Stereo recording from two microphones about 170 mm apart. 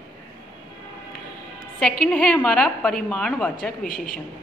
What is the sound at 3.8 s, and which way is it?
Speech, 55° left (ahead or behind).